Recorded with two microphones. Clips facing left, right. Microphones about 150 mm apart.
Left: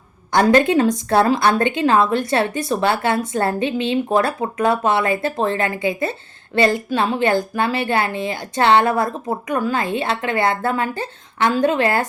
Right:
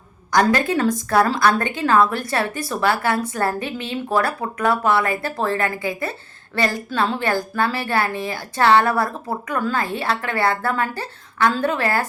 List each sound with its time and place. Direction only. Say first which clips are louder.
0.3 s a woman's voice: left 4 dB; 25° left (ahead or behind)